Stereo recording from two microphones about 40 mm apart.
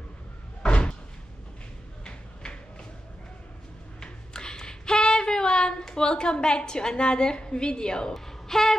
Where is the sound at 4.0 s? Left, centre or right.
Centre.